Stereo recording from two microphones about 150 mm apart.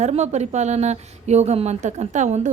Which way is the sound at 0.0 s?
50° right (ahead or behind).